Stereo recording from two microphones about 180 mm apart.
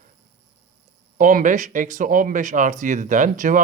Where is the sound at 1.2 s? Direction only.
50° right (ahead or behind).